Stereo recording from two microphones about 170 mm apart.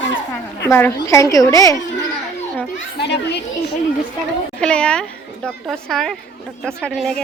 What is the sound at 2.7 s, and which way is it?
Speech, 85° left.